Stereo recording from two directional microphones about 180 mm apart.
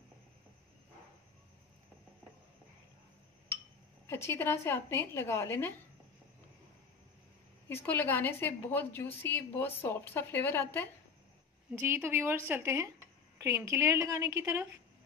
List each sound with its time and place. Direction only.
4.1 s a woman's voice: 15° left (ahead or behind)
7.6 s a woman's voice: 10° left (ahead or behind)
11.8 s a woman's voice: 15° right (ahead or behind)